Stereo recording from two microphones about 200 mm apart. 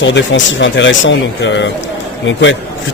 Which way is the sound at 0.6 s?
70° left (ahead or behind).